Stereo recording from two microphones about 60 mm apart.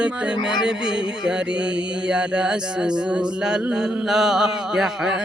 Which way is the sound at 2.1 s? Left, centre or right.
Centre.